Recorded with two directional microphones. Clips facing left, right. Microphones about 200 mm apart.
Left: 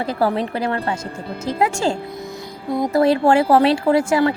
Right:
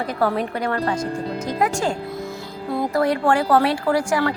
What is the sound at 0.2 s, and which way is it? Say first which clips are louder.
A woman's voice: left 1 dB; 25° left (ahead or behind).